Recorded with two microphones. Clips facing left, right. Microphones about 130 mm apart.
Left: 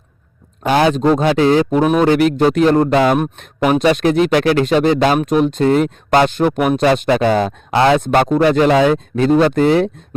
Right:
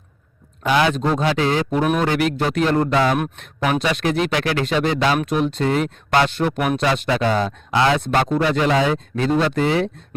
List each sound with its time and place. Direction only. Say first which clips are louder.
0.6 s speech: left 5 dB; 45° left (ahead or behind)
2.9 s speech: left 5 dB; 50° left (ahead or behind)
7.3 s speech: left 5 dB; 65° left (ahead or behind); by 9.9 s 45° left (ahead or behind)